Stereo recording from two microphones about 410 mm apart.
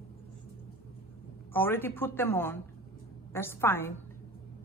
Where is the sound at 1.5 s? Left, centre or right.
Centre.